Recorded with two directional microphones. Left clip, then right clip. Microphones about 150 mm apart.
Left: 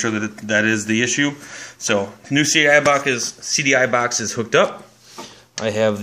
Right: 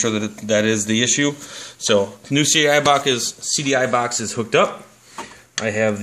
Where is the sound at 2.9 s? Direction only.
40° right (ahead or behind).